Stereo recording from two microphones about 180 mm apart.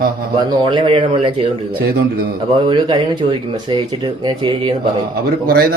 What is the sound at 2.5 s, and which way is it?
Speech, 30° right (ahead or behind).